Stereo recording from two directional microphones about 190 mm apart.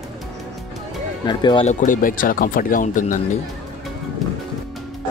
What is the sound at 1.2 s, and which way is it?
Speech, 25° left (ahead or behind).